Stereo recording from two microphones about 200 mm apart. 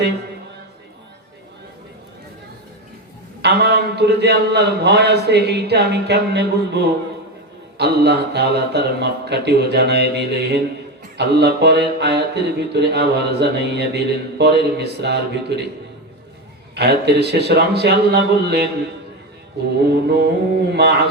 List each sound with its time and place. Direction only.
3.4 s mantra: 55° right (ahead or behind)
16.7 s mantra: 55° right (ahead or behind)
19.9 s mantra: 55° right (ahead or behind)